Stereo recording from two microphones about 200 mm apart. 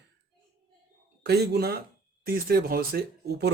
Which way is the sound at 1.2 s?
55° right (ahead or behind).